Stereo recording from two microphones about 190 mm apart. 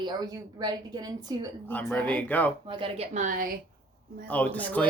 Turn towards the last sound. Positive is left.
turn(degrees=10)  # may be behind; listen again after turning